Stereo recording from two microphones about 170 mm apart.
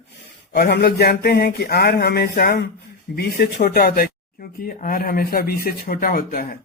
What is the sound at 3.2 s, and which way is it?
Speech, 70° left (ahead or behind).